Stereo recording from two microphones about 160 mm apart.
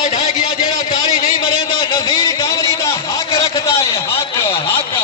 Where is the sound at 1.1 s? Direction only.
60° left (ahead or behind).